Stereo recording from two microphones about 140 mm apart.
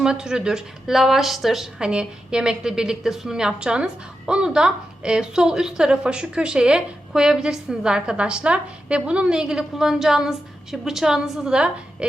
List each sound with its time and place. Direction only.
0.0 s a woman's voice: 5° right (ahead or behind)